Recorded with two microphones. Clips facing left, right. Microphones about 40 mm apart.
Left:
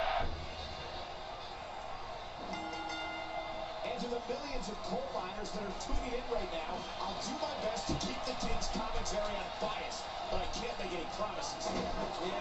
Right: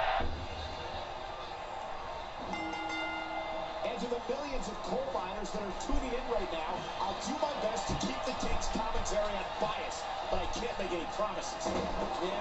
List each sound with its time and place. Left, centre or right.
0.0 s music: right
3.8 s music: right
5.9 s speech: right